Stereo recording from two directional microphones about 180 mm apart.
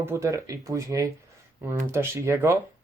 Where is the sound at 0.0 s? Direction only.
15° right (ahead or behind).